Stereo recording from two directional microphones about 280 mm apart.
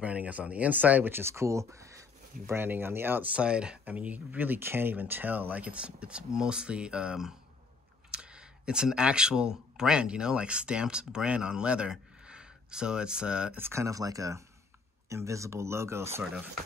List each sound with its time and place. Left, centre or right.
0.0 s speech: centre